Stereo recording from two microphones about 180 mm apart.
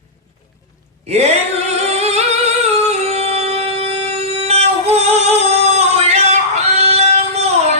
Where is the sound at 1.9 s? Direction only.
35° right (ahead or behind).